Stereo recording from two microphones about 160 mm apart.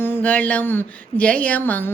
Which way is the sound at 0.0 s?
10° left (ahead or behind).